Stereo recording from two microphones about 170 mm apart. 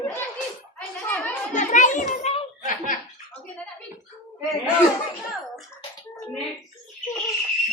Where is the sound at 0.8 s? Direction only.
10° left (ahead or behind).